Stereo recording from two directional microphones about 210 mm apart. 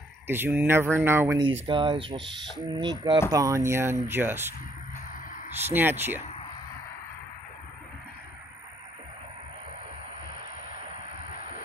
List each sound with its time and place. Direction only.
0.3 s speech: 10° right (ahead or behind)
1.7 s speech: 25° right (ahead or behind)
5.7 s speech: 10° right (ahead or behind)